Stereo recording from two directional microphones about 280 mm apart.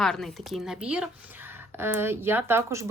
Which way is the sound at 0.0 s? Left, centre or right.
Centre.